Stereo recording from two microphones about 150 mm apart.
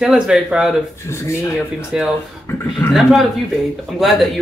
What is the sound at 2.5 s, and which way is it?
Speech, 15° left (ahead or behind).